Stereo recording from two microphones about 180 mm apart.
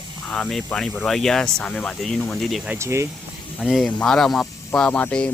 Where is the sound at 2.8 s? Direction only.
15° right (ahead or behind).